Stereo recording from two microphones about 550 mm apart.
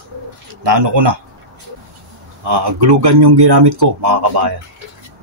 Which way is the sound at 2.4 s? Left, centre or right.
Right.